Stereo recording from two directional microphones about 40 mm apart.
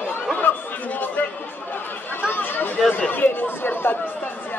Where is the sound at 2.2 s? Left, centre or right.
Left.